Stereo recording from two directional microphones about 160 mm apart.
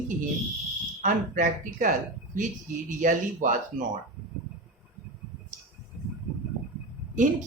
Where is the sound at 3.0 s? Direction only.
55° right (ahead or behind).